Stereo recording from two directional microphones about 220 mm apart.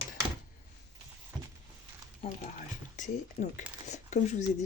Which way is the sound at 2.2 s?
35° left (ahead or behind).